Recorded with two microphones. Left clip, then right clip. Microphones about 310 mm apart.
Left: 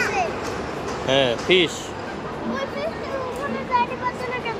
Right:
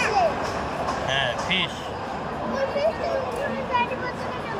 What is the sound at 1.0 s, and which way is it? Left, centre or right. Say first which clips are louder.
Speech: left 8 dB; centre.